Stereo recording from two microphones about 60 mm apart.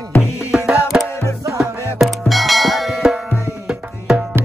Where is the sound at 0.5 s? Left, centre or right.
Centre.